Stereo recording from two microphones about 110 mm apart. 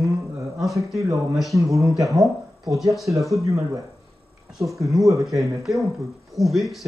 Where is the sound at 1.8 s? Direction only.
30° right (ahead or behind).